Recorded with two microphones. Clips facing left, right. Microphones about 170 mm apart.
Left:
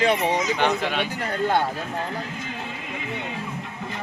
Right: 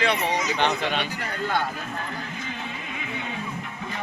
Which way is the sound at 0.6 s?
10° left (ahead or behind).